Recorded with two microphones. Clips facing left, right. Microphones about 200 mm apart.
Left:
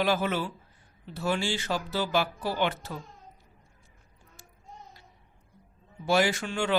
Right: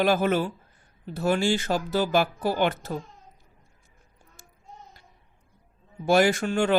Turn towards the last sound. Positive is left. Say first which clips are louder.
# right 5 dB
turn(degrees=-50)  # may be behind; listen again after turning